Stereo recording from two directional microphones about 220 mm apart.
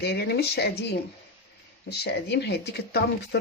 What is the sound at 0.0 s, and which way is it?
Speech, 50° left (ahead or behind).